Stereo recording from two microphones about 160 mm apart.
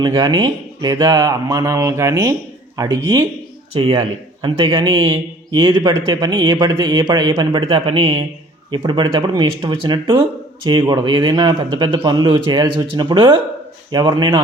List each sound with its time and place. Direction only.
0.0 s speech: 25° right (ahead or behind)
3.8 s speech: 35° right (ahead or behind)